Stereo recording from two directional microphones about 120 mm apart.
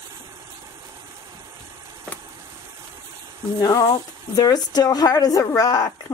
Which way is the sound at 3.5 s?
30° left (ahead or behind).